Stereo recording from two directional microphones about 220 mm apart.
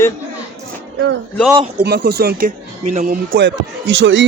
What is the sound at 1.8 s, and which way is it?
Speech, 50° right (ahead or behind).